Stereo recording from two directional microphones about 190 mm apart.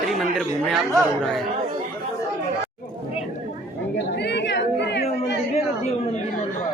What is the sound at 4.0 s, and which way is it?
Chatter, 65° left (ahead or behind).